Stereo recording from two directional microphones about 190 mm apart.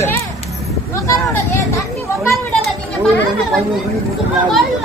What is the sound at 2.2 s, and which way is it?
Children playing, 15° left (ahead or behind).